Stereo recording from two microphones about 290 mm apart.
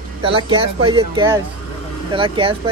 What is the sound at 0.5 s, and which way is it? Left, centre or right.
Speech, centre.